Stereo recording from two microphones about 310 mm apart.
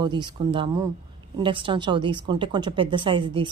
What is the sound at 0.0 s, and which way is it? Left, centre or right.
A woman's voice, centre.